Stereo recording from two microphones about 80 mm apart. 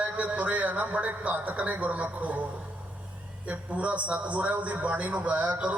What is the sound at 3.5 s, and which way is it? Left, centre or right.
A man's voice, centre.